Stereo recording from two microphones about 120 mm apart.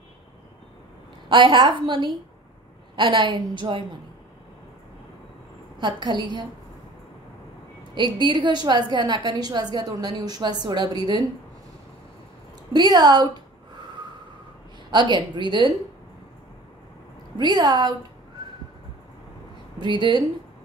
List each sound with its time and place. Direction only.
1.3 s a woman's voice: 40° right (ahead or behind)
7.9 s a woman's voice: 40° right (ahead or behind)
12.7 s a woman's voice: 35° right (ahead or behind)
14.9 s a woman's voice: 40° right (ahead or behind)
17.4 s a woman's voice: 35° right (ahead or behind)
19.8 s a woman's voice: 40° right (ahead or behind)